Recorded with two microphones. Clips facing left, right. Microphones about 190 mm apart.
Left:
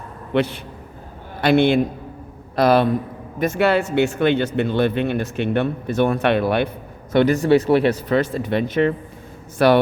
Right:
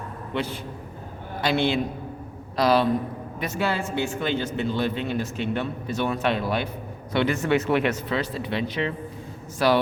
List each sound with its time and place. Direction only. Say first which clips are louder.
0.3 s a man's voice: left 9 dB; 70° left (ahead or behind)
1.4 s a man's voice: left 8 dB; 60° left (ahead or behind)
3.6 s speech: left 8 dB; 70° left (ahead or behind)
7.1 s speech: left 7 dB; 45° left (ahead or behind)
8.1 s speech: left 7 dB; 50° left (ahead or behind)